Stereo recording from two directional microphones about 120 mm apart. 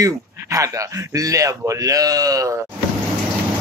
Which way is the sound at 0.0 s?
30° right (ahead or behind).